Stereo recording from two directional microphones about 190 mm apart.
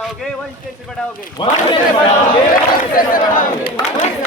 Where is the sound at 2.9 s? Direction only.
45° left (ahead or behind).